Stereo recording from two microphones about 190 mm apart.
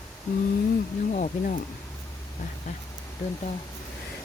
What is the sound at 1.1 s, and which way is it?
Speech, 40° left (ahead or behind).